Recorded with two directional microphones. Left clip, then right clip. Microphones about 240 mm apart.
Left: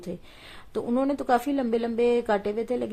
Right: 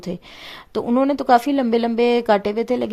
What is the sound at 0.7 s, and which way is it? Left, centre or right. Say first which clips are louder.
Mantra: right 7 dB; right.